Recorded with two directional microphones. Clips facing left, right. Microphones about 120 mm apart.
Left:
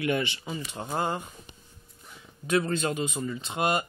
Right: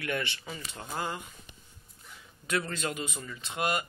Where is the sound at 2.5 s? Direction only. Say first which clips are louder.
Left 6 dB; 25° left (ahead or behind).